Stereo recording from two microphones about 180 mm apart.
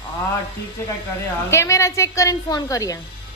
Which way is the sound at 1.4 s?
15° left (ahead or behind).